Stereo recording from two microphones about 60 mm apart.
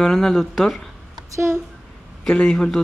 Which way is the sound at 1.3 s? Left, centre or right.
Right.